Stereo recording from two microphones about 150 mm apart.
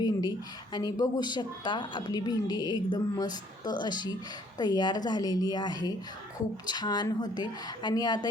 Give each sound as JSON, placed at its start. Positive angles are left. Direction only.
{"t": 0.0, "sound": "a woman's voice", "side_deg": 30}